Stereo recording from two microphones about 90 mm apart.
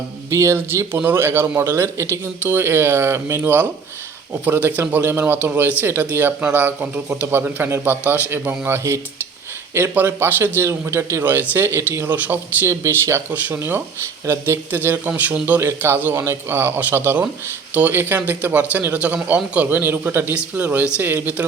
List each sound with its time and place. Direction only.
0.3 s a man's voice: 30° right (ahead or behind)
3.4 s a man's voice: 20° right (ahead or behind)
12.8 s speech: 30° right (ahead or behind)
13.3 s a man's voice: 20° right (ahead or behind)